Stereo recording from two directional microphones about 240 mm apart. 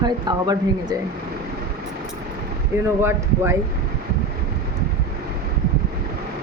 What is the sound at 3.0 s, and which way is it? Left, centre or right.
Speech, centre.